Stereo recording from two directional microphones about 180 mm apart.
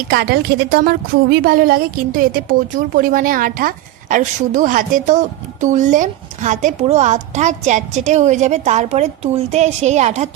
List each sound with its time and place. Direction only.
0.1 s a woman's voice: 60° right (ahead or behind); by 10.3 s 40° right (ahead or behind)